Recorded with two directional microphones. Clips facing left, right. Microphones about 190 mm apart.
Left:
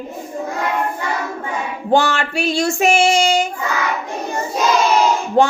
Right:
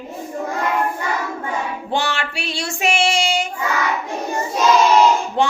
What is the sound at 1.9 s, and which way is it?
Child singing, 45° left (ahead or behind).